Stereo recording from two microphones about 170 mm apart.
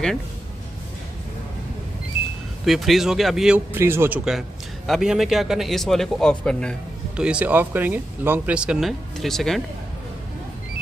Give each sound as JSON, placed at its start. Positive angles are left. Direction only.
{"t": 2.6, "sound": "a man's voice", "side_deg": 0}
{"t": 4.2, "sound": "a man's voice", "side_deg": 0}
{"t": 7.2, "sound": "a man's voice", "side_deg": -5}